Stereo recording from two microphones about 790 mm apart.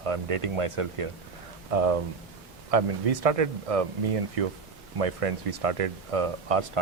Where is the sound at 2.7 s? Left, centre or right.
Right.